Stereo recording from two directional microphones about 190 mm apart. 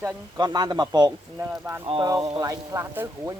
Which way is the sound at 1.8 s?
25° right (ahead or behind).